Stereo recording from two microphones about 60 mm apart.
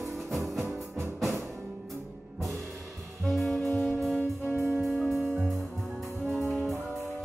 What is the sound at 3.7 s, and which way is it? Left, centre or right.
Music, centre.